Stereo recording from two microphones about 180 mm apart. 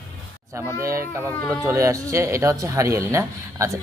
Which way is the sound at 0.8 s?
15° right (ahead or behind).